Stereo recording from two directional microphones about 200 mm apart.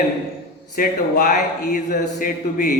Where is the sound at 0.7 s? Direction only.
45° left (ahead or behind).